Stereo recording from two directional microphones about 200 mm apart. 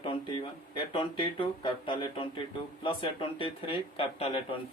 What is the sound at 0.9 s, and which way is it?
Speech, 25° left (ahead or behind).